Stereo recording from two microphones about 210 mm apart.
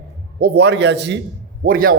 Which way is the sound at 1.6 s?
45° right (ahead or behind).